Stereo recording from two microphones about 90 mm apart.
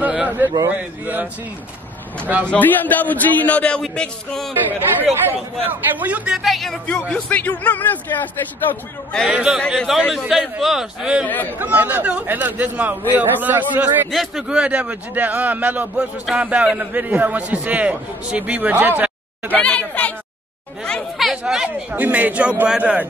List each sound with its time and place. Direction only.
0.0 s a man's voice: 15° right (ahead or behind)
2.5 s a man's voice: 20° left (ahead or behind)
4.6 s a man's voice: 20° right (ahead or behind); by 6.8 s centre (ahead or behind)
6.9 s a man's voice: 10° left (ahead or behind)
9.3 s a man's voice: 10° right (ahead or behind)
11.5 s speech: 20° right (ahead or behind)
14.1 s a man's voice: centre (ahead or behind); by 19.5 s 20° right (ahead or behind)
19.5 s a man's voice: 15° left (ahead or behind)
21.3 s a man's voice: 5° right (ahead or behind)
21.6 s a man's voice: 15° right (ahead or behind)